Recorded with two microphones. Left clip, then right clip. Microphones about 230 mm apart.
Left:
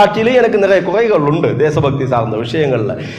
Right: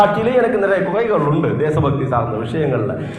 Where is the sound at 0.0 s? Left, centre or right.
Left.